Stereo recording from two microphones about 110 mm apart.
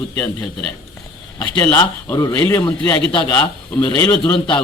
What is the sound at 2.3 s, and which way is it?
Speech, 15° left (ahead or behind).